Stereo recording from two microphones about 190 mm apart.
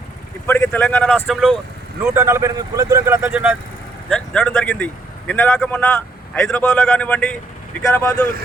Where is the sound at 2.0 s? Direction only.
15° right (ahead or behind).